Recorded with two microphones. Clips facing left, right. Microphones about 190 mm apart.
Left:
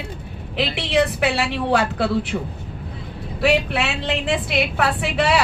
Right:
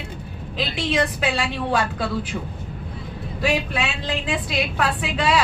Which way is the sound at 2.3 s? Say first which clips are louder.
Left 4 dB; 50° left (ahead or behind).